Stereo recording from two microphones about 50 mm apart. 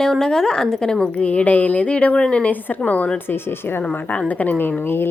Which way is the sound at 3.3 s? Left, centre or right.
Left.